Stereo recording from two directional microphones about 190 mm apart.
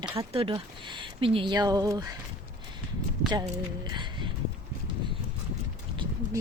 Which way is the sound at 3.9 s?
25° right (ahead or behind).